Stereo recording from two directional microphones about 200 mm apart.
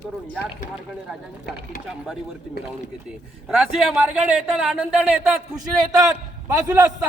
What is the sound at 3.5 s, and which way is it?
A man's voice, 5° right (ahead or behind).